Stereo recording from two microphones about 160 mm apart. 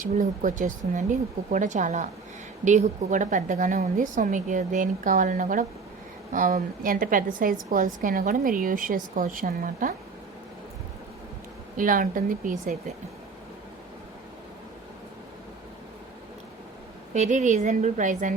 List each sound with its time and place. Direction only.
0.0 s a woman's voice: 55° right (ahead or behind)
11.8 s a woman's voice: 60° right (ahead or behind)
17.2 s a woman's voice: 50° right (ahead or behind)